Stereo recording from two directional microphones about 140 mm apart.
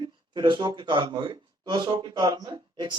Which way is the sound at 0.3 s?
35° right (ahead or behind).